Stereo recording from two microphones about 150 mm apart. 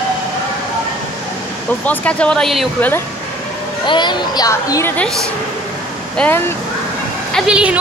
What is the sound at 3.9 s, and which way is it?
Speech, 30° left (ahead or behind).